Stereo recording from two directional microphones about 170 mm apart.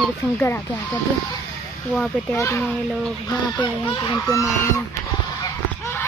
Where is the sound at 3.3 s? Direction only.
30° left (ahead or behind).